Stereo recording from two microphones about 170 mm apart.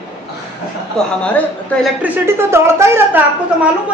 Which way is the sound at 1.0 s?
5° left (ahead or behind).